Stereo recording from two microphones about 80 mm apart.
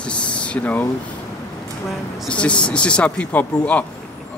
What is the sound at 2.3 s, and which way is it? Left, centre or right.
Speech, centre.